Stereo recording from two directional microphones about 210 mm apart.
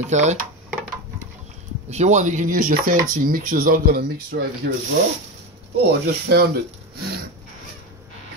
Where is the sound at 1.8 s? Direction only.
35° right (ahead or behind).